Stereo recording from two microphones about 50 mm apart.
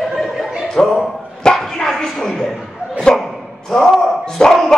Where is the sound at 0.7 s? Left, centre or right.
Centre.